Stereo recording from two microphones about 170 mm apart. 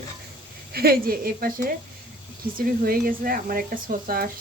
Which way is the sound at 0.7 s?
65° right (ahead or behind).